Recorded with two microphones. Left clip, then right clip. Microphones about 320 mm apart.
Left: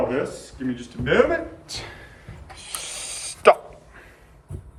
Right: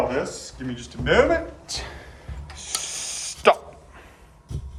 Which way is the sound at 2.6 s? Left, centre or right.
Centre.